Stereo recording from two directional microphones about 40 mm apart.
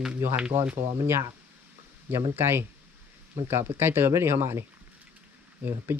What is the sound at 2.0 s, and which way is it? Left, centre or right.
Speech, right.